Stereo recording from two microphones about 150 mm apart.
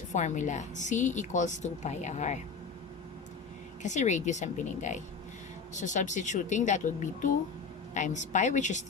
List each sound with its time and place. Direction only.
0.1 s a woman's voice: 50° left (ahead or behind)
3.8 s a woman's voice: 50° left (ahead or behind)